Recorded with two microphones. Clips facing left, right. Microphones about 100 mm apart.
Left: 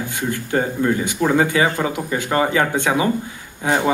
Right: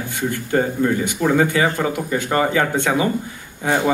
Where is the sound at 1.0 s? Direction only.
20° left (ahead or behind).